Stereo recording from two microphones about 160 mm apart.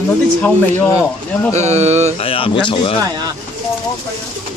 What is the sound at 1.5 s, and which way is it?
Speech, 45° right (ahead or behind).